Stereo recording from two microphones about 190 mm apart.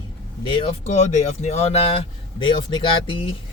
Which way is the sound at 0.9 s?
35° left (ahead or behind).